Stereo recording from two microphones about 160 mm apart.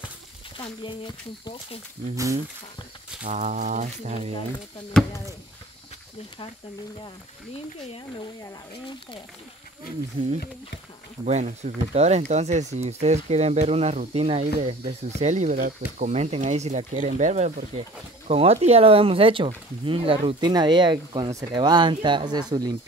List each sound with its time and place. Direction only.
0.6 s speech: 30° left (ahead or behind)
2.1 s speech: 20° right (ahead or behind)
3.3 s speech: 50° right (ahead or behind)
4.9 s speech: 5° left (ahead or behind)
11.2 s speech: 45° right (ahead or behind)
18.3 s speech: 40° right (ahead or behind)